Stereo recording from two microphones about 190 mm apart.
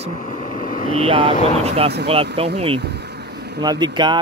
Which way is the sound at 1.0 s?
30° right (ahead or behind).